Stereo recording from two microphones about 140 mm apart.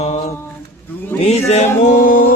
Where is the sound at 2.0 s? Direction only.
85° left.